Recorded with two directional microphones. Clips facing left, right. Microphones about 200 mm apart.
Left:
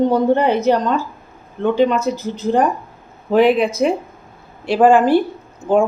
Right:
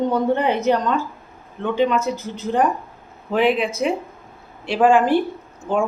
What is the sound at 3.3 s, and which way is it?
Speech, 40° left (ahead or behind).